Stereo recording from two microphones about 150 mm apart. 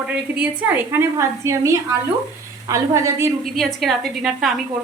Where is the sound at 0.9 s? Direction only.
20° right (ahead or behind).